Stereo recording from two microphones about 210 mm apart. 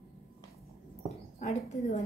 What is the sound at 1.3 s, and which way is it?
Speech, 35° left (ahead or behind).